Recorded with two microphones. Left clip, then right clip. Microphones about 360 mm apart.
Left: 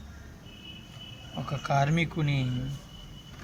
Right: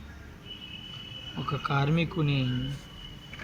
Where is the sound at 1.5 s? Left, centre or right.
Left.